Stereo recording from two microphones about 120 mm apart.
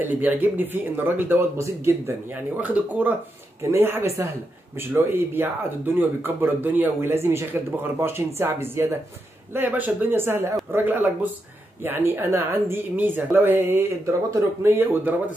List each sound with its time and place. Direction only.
0.0 s speech: 15° right (ahead or behind)